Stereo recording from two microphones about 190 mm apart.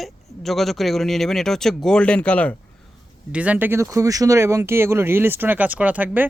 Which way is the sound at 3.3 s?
5° right (ahead or behind).